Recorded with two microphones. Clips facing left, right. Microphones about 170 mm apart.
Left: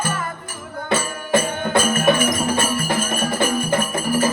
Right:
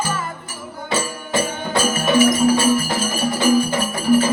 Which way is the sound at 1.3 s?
55° left (ahead or behind).